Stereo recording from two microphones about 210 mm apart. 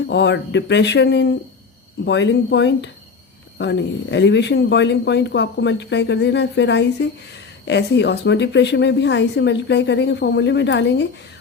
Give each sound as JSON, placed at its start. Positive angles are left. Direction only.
{"t": 0.1, "sound": "speech", "side_deg": 55}